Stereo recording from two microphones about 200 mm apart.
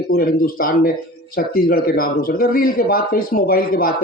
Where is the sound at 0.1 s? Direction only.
45° left (ahead or behind).